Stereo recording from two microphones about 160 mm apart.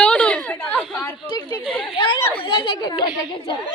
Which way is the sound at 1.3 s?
25° left (ahead or behind).